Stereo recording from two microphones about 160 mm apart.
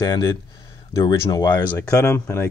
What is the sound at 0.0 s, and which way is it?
Speech, 25° left (ahead or behind).